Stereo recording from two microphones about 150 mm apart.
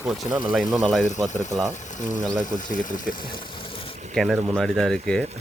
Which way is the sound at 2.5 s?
60° left (ahead or behind).